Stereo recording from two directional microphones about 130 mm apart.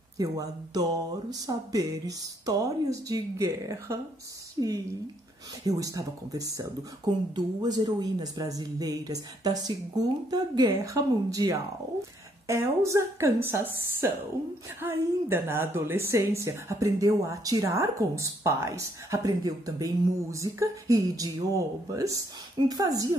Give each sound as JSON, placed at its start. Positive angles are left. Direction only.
{"t": 0.2, "sound": "a woman's voice", "side_deg": -30}
{"t": 5.7, "sound": "a woman's voice", "side_deg": -25}